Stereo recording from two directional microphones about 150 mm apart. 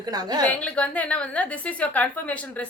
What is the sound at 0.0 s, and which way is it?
Speech, 25° right (ahead or behind).